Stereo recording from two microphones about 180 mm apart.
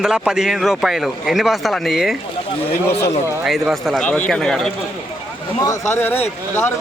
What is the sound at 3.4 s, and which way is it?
Speech, centre (ahead or behind).